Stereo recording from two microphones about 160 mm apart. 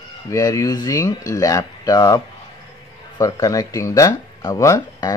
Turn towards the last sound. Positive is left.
turn(degrees=20)  # may be behind; listen again after turning